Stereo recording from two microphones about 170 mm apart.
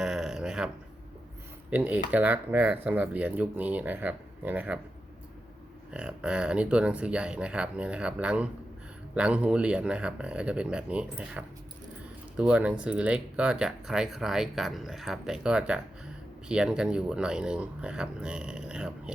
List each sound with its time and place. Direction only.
0.0 s a sound: 5° right (ahead or behind)
1.7 s speech: 10° right (ahead or behind)
5.9 s speech: 5° right (ahead or behind)